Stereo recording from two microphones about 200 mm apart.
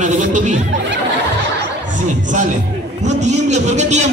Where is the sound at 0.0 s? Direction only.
35° right (ahead or behind).